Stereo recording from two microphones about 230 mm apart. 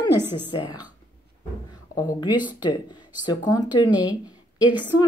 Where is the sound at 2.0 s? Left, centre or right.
Centre.